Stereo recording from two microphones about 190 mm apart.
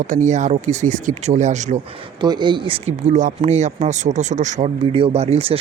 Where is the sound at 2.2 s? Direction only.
25° right (ahead or behind).